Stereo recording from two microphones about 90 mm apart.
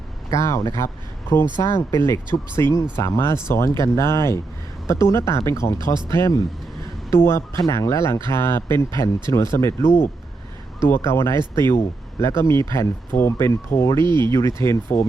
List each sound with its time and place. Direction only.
0.3 s speech: 35° left (ahead or behind)
14.0 s speech: 60° right (ahead or behind)
14.3 s speech: 35° left (ahead or behind)